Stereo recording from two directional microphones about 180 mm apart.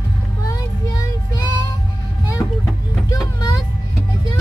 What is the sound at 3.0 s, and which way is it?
Speech, 20° left (ahead or behind).